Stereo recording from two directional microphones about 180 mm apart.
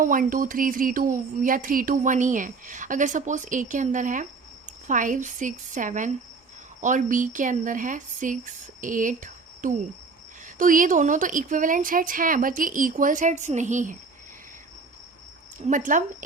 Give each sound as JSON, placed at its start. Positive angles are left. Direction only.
{"t": 0.0, "sound": "speech", "side_deg": -50}
{"t": 15.5, "sound": "speech", "side_deg": -45}